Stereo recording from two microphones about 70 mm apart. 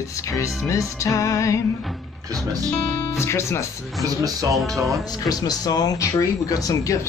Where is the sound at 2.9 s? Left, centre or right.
Left.